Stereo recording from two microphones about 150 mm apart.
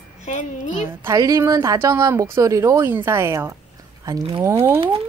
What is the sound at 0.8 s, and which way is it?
A woman's voice, 20° right (ahead or behind).